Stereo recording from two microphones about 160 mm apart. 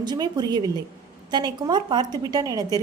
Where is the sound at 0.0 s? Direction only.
25° right (ahead or behind).